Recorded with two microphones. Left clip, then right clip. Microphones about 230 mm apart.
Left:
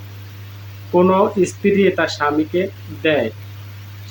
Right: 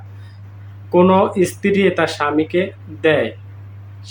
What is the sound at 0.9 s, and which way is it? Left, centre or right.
Speech, centre.